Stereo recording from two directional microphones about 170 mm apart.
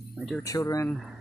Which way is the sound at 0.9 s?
Centre (ahead or behind).